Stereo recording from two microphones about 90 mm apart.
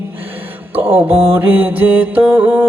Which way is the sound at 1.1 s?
90° right.